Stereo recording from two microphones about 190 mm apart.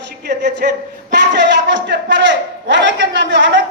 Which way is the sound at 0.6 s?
50° right (ahead or behind).